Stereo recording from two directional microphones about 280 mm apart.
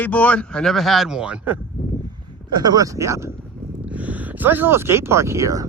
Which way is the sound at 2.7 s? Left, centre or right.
Centre.